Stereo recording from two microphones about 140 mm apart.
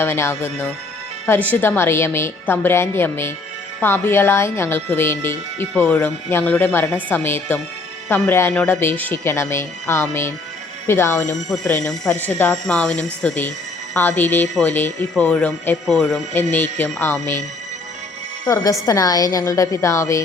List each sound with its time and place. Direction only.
0.0 s a woman's voice: 20° left (ahead or behind)
11.4 s speech: 5° left (ahead or behind)
16.3 s speech: 15° left (ahead or behind)
18.4 s a woman's voice: 25° left (ahead or behind)